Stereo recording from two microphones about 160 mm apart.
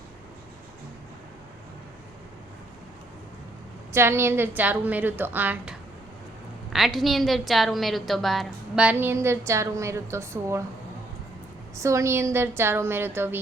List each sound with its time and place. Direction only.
3.9 s a woman's voice: 15° right (ahead or behind)
6.7 s a woman's voice: centre (ahead or behind); by 10.6 s 15° right (ahead or behind)
11.8 s a woman's voice: 20° right (ahead or behind)